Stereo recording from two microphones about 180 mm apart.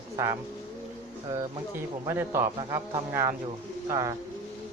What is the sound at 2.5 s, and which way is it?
Speech, 30° right (ahead or behind).